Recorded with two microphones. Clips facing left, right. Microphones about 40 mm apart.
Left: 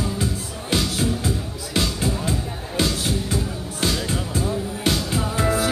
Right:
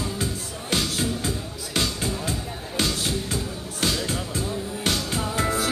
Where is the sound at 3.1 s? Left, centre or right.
Centre.